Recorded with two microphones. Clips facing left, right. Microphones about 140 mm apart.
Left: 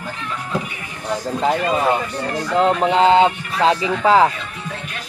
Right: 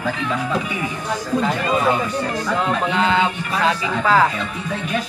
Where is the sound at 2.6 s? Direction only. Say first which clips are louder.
Left 7 dB; 30° left (ahead or behind).